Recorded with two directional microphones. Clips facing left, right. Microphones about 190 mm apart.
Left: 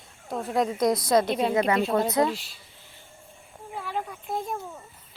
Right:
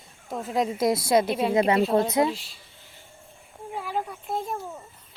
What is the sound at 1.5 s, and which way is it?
Speech, 25° right (ahead or behind).